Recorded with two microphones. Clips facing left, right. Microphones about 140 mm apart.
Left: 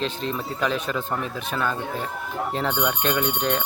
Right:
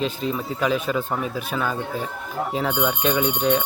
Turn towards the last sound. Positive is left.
turn(degrees=-5)  # may be behind; listen again after turning